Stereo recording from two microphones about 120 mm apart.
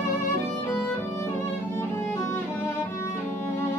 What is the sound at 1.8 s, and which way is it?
Music, 20° left (ahead or behind).